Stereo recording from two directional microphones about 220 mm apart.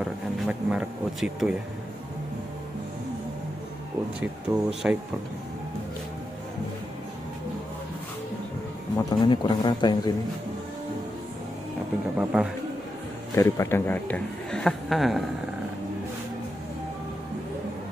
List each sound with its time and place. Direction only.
0.0 s speech: 5° right (ahead or behind)
4.2 s speech: 5° right (ahead or behind)
8.9 s speech: 20° left (ahead or behind)
12.2 s speech: 5° right (ahead or behind)
13.3 s a man's voice: 10° left (ahead or behind)